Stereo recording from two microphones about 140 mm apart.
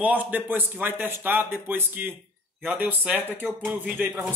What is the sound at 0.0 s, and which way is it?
Speech, 10° right (ahead or behind).